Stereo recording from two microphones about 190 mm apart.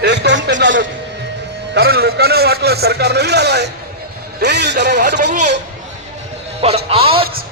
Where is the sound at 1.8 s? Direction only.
55° right (ahead or behind).